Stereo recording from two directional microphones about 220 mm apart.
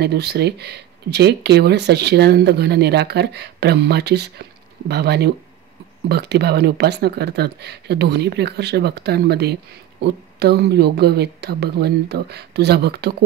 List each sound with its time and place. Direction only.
0.0 s speech: 50° right (ahead or behind)